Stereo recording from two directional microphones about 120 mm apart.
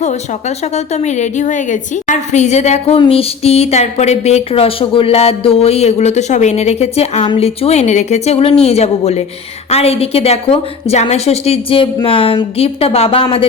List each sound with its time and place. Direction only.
0.0 s a woman's voice: 70° left (ahead or behind); by 13.2 s 55° left (ahead or behind)